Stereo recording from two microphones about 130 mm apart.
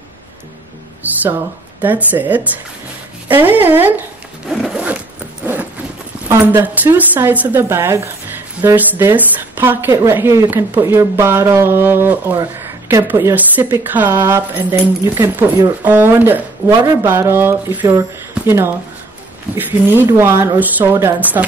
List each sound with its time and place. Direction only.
1.8 s a woman's voice: 15° right (ahead or behind)
4.5 s zipper: centre (ahead or behind)
6.2 s a woman's voice: 15° right (ahead or behind)
19.5 s a woman's voice: 15° right (ahead or behind)